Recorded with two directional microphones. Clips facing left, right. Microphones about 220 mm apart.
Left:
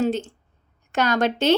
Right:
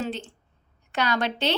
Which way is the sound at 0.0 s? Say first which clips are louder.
Left 8 dB; 40° left (ahead or behind).